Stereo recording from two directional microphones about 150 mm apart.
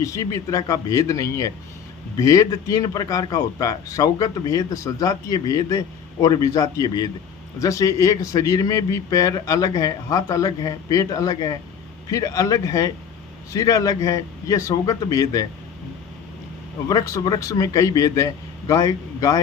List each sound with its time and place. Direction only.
0.0 s speech: 20° left (ahead or behind)
16.9 s speech: 25° left (ahead or behind)